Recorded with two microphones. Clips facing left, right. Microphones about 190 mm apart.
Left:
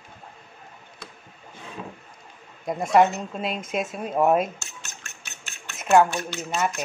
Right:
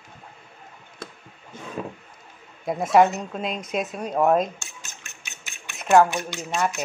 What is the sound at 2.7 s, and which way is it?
A woman's voice, centre (ahead or behind).